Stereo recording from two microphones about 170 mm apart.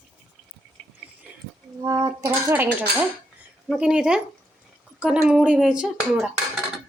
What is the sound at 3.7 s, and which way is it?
Speech, 5° right (ahead or behind).